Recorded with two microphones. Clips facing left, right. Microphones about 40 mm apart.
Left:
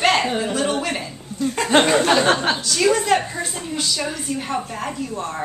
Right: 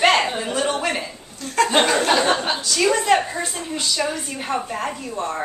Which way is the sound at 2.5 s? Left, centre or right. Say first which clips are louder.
Left 1 dB; centre.